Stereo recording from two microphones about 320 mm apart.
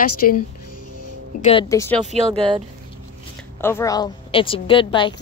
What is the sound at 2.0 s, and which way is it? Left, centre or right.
Speech, centre.